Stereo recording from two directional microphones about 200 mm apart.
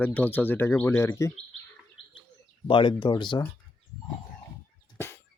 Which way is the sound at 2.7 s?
25° left (ahead or behind).